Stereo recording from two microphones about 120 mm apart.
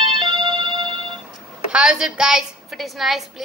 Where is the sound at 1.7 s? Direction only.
5° right (ahead or behind).